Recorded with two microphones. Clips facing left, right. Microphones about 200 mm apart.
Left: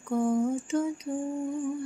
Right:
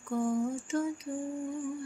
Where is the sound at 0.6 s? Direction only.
20° left (ahead or behind).